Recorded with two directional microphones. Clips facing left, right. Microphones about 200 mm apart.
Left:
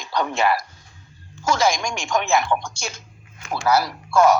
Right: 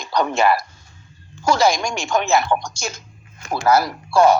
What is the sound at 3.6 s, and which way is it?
Speech, 50° right (ahead or behind).